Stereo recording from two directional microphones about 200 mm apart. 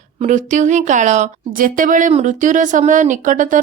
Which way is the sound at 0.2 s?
35° right (ahead or behind).